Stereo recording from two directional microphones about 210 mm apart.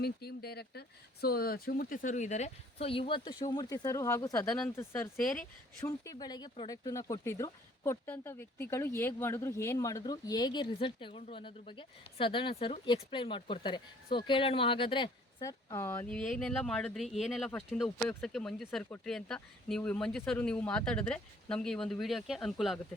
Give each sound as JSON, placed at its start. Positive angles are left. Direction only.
{"t": 0.0, "sound": "speech", "side_deg": 50}